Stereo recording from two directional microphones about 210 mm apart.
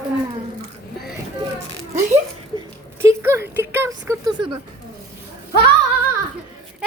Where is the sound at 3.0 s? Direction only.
10° right (ahead or behind).